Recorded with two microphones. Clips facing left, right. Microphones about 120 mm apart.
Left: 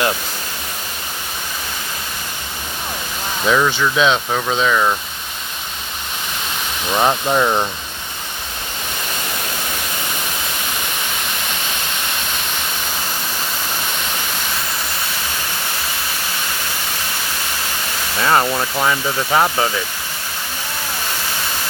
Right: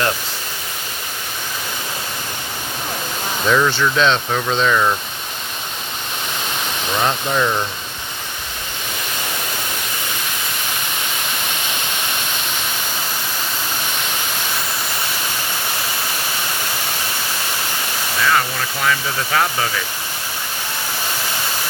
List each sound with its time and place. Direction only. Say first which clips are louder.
3.4 s speech: even; 5° left (ahead or behind)
6.9 s speech: left 4 dB; 20° left (ahead or behind)
18.2 s speech: left 3 dB; 35° left (ahead or behind)
18.9 s speech: right 1 dB; 20° left (ahead or behind)